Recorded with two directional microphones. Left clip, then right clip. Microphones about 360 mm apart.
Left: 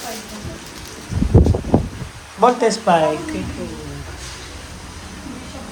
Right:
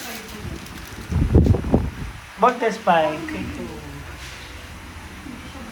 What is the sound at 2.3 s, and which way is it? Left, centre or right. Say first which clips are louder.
Speech: left 4 dB; centre.